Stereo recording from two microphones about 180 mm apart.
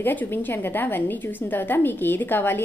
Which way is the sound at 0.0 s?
10° left (ahead or behind).